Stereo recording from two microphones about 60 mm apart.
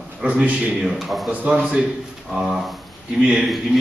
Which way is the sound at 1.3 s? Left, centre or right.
Right.